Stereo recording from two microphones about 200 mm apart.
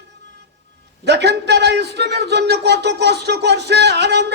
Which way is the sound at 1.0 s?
55° right (ahead or behind).